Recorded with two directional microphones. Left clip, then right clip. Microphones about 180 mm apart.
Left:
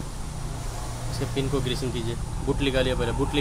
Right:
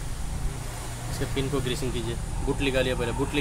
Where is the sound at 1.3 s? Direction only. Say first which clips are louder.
Left 1 dB; 5° right (ahead or behind).